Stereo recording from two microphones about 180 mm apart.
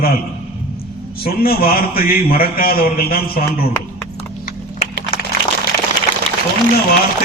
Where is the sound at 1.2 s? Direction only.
55° left (ahead or behind).